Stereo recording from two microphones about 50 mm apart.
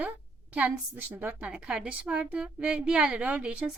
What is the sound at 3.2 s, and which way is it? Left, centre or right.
Speech, right.